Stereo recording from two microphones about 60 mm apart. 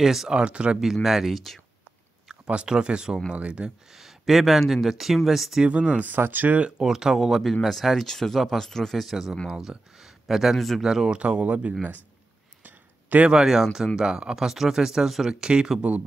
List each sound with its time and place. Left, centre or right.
0.0 s speech: centre
0.3 s speech: centre
1.0 s speech: centre
2.2 s speech: centre
3.9 s speech: centre
5.7 s speech: centre
6.0 s speech: right
6.8 s speech: centre
11.1 s speech: centre
12.6 s a sound: right
13.3 s speech: centre